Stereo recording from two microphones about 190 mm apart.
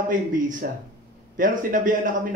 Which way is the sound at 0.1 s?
45° right (ahead or behind).